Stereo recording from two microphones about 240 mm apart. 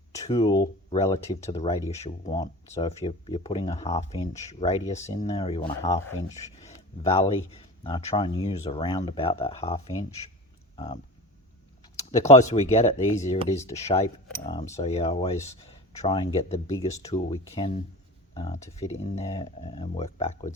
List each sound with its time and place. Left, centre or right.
0.3 s speech: centre
2.0 s speech: left
6.7 s speech: left
12.3 s speech: left